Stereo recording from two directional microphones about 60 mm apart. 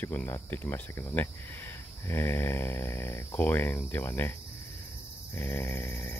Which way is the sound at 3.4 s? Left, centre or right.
Left.